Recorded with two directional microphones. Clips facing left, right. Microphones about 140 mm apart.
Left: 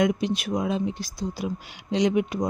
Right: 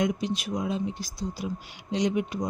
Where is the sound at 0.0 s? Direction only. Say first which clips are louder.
Left 4 dB; 70° left (ahead or behind).